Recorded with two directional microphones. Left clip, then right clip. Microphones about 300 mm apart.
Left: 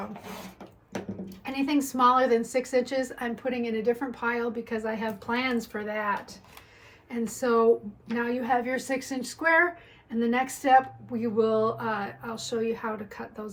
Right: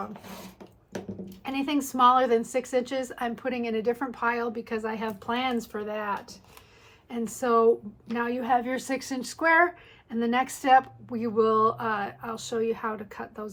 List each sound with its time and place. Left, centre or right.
0.6 s dog: centre
1.5 s a sound: centre
1.9 s speech: centre
2.5 s speech: centre